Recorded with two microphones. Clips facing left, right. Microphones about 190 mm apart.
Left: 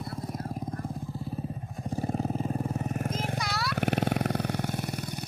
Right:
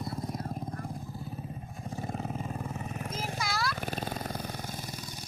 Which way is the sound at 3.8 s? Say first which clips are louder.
Left 8 dB; 70° left (ahead or behind).